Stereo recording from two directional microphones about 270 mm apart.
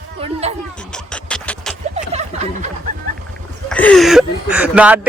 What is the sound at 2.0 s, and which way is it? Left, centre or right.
Snicker, right.